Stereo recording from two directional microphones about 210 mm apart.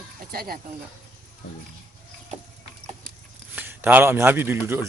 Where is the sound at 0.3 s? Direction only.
45° right (ahead or behind).